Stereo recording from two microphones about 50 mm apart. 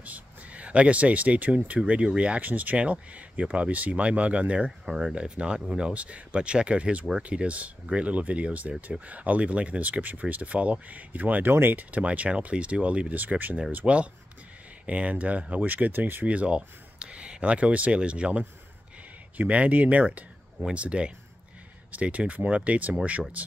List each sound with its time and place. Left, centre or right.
0.0 s a sound: right
1.9 s speech: right
2.4 s speech: right
13.1 s speech: right
16.3 s speech: right